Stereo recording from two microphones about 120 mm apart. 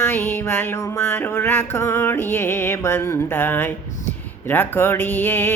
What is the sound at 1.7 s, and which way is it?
Music, 20° left (ahead or behind).